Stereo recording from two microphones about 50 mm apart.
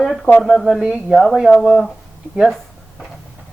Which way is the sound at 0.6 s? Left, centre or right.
Centre.